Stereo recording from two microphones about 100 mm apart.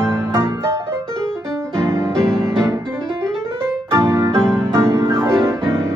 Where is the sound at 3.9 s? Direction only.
25° right (ahead or behind).